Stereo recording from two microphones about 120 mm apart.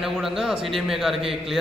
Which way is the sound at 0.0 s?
Centre (ahead or behind).